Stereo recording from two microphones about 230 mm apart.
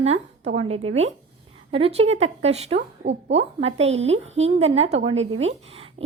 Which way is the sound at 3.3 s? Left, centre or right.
Right.